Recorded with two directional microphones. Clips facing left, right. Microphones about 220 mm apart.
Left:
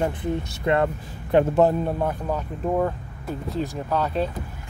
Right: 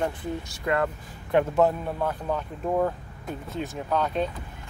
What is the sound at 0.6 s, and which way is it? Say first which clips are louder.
Speech: left 4 dB; 25° left (ahead or behind).